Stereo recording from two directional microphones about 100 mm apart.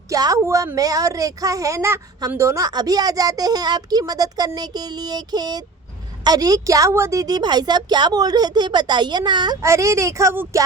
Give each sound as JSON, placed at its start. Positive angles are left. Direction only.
{"t": 0.1, "sound": "a woman's voice", "side_deg": -35}
{"t": 9.6, "sound": "speech", "side_deg": -30}